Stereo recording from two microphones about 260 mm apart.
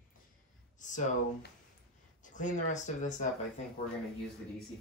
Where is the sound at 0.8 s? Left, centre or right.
Left.